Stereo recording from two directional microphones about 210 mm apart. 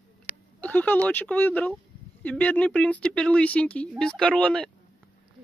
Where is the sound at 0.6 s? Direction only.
5° left (ahead or behind).